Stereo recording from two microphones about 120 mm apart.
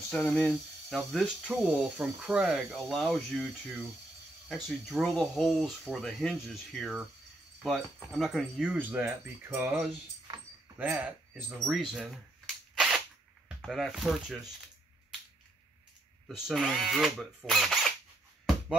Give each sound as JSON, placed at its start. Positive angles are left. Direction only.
{"t": 0.2, "sound": "speech", "side_deg": 5}
{"t": 4.6, "sound": "speech", "side_deg": 0}
{"t": 11.7, "sound": "speech", "side_deg": 0}
{"t": 12.7, "sound": "cap gun", "side_deg": -5}
{"t": 13.6, "sound": "speech", "side_deg": 0}
{"t": 16.3, "sound": "speech", "side_deg": -5}